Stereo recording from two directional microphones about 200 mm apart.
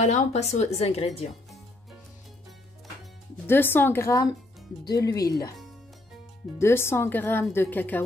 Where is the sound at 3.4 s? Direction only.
10° left (ahead or behind).